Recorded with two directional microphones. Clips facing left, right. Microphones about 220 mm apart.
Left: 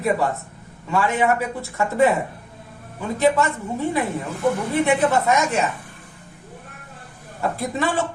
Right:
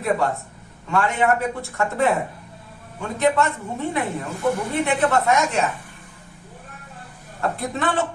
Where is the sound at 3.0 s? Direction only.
Centre (ahead or behind).